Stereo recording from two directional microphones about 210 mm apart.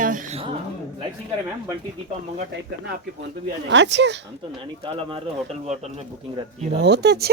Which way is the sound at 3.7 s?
55° right (ahead or behind).